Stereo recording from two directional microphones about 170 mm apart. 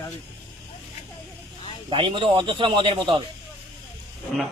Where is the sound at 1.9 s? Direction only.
30° right (ahead or behind).